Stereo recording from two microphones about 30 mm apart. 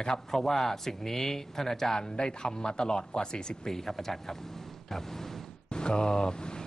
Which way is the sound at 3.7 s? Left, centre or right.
Centre.